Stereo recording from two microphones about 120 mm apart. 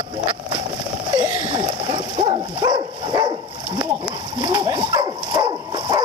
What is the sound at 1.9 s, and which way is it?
Dog, 40° right (ahead or behind).